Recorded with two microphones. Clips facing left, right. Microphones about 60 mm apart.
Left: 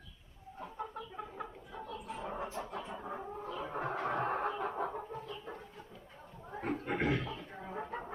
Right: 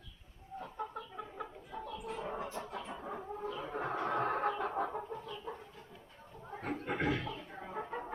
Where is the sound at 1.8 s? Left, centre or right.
Left.